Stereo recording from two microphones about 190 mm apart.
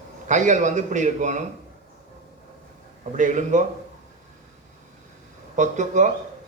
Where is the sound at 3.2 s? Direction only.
40° right (ahead or behind).